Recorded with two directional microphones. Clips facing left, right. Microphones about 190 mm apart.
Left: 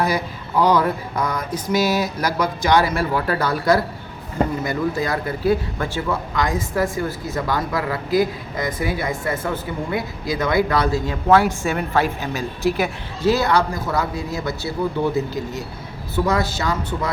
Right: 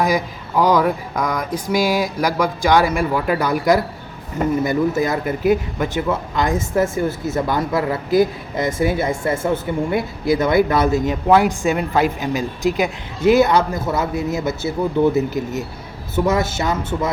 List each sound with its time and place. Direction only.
0.6 s speech: 10° right (ahead or behind)